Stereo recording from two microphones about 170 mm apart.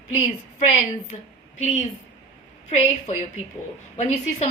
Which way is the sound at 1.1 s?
40° left (ahead or behind).